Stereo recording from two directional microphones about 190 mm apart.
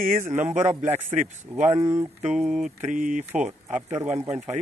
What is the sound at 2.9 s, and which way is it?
Speech, 45° right (ahead or behind).